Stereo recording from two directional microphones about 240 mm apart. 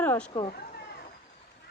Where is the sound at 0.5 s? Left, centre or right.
Left.